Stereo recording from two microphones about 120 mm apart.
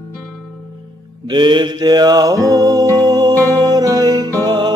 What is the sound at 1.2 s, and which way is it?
Music, 40° right (ahead or behind).